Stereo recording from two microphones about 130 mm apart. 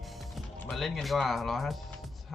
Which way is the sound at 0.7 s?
Centre (ahead or behind).